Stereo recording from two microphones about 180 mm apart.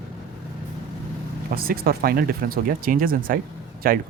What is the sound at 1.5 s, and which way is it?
Speech, 55° right (ahead or behind).